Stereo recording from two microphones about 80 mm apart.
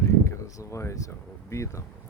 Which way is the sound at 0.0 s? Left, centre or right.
Left.